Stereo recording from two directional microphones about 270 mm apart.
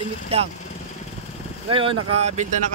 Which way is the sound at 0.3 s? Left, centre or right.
Right.